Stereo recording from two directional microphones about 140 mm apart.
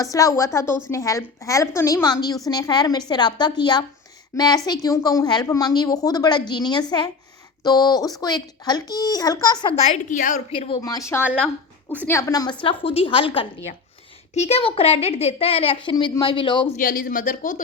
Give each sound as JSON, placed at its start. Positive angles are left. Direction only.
{"t": 0.0, "sound": "a woman's voice", "side_deg": 25}
{"t": 9.7, "sound": "a woman's voice", "side_deg": 55}
{"t": 10.5, "sound": "a woman's voice", "side_deg": 40}
{"t": 10.8, "sound": "a woman's voice", "side_deg": 25}
{"t": 12.6, "sound": "a woman's voice", "side_deg": 40}
{"t": 16.7, "sound": "speech", "side_deg": 90}